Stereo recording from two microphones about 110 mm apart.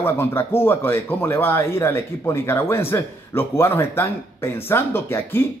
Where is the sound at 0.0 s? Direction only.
20° left (ahead or behind).